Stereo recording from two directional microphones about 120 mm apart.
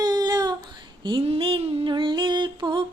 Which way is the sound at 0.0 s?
35° right (ahead or behind).